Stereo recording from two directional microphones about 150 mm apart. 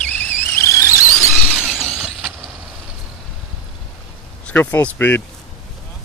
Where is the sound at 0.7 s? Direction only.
20° left (ahead or behind).